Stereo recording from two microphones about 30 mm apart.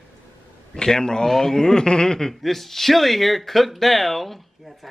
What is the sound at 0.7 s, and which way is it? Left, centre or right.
Speech, left.